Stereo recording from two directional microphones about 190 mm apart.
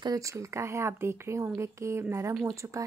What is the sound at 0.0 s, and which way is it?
Speech, 15° right (ahead or behind).